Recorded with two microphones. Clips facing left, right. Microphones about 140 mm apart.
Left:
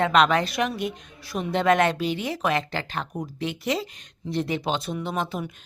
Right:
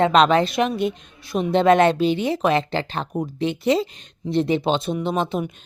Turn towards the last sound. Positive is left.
turn(degrees=-25)  # may be behind; listen again after turning